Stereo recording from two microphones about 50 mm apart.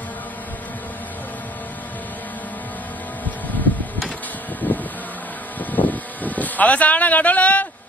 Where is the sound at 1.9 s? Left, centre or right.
Left.